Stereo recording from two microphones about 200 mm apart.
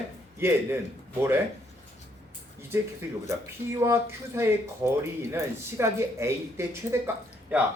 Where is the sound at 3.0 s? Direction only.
10° right (ahead or behind).